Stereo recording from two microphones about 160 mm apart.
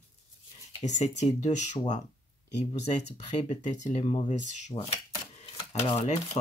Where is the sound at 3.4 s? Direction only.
45° left (ahead or behind).